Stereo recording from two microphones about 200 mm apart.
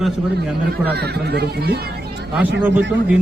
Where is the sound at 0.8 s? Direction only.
55° right (ahead or behind).